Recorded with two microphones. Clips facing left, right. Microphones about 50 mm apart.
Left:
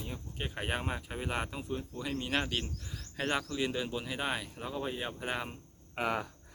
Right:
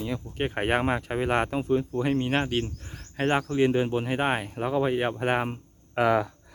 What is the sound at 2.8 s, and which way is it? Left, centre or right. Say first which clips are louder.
Speech: right 8 dB; right.